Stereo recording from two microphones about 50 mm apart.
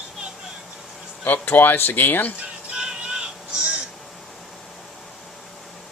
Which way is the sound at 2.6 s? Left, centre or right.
Centre.